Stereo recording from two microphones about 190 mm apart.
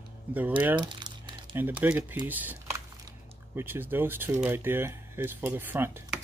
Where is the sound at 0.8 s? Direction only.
25° right (ahead or behind).